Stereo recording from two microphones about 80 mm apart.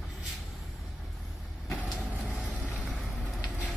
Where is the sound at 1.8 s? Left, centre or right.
Centre.